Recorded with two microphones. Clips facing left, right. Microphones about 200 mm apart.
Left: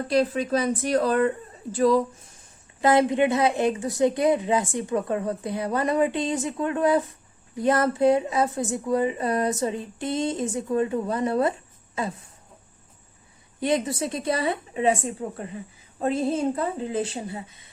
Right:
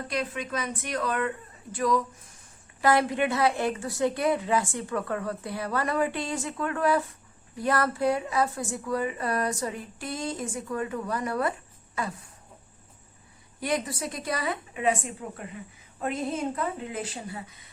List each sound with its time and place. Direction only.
0.1 s a woman's voice: 35° left (ahead or behind)
13.6 s a woman's voice: 25° left (ahead or behind)